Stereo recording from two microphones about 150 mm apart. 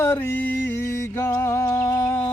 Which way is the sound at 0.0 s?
15° left (ahead or behind).